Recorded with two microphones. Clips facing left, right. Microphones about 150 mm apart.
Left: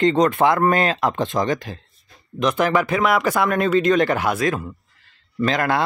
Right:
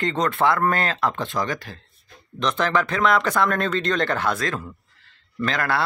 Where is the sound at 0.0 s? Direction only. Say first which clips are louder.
Left 5 dB; 15° left (ahead or behind).